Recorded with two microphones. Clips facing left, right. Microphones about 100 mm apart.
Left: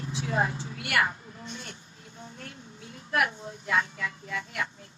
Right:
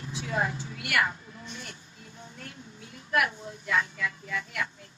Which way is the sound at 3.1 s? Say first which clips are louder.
Even; 35° left (ahead or behind).